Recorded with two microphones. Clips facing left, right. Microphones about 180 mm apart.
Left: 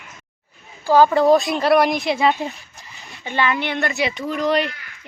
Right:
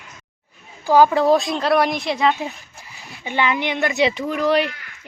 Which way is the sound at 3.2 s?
15° right (ahead or behind).